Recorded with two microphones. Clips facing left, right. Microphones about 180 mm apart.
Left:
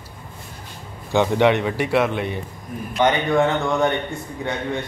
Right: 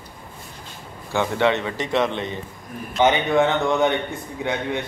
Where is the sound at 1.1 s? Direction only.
15° left (ahead or behind); by 4.6 s centre (ahead or behind).